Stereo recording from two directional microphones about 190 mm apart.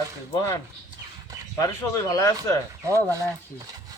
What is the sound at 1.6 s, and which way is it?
Speech, 20° left (ahead or behind).